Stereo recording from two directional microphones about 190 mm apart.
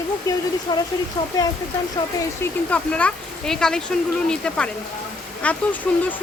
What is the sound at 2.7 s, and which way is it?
A woman's voice, 5° left (ahead or behind).